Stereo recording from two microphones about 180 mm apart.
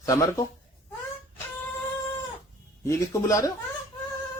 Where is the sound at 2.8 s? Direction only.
20° left (ahead or behind).